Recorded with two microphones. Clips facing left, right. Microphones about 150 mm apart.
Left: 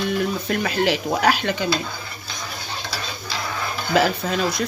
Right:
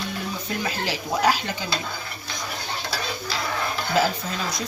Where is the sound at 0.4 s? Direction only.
65° left (ahead or behind).